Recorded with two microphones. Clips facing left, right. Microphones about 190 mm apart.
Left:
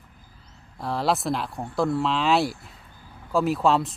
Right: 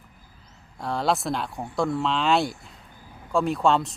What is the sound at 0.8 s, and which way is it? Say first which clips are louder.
Speech: even; centre (ahead or behind).